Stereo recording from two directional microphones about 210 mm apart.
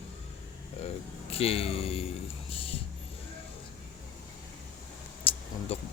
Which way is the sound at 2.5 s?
25° left (ahead or behind).